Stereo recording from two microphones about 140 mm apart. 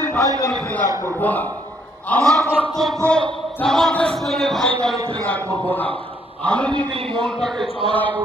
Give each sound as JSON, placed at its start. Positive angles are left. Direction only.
{"t": 0.0, "sound": "a sound", "side_deg": 20}
{"t": 0.5, "sound": "a man's voice", "side_deg": 10}
{"t": 7.5, "sound": "speech", "side_deg": -35}